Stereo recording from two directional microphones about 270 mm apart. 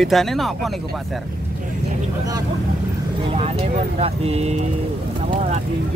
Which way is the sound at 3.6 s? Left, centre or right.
Right.